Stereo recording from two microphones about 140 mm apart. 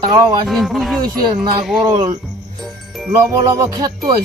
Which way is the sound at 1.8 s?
30° right (ahead or behind).